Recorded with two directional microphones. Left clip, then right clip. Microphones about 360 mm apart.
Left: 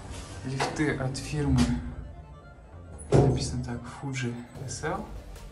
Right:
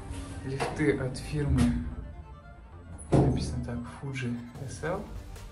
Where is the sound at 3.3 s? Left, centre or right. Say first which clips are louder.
Left 2 dB; centre.